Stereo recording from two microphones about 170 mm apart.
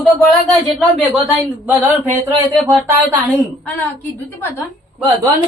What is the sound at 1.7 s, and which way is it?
Speech, 10° right (ahead or behind).